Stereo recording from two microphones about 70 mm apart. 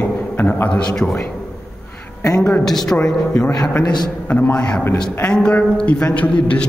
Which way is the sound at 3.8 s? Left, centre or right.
Left.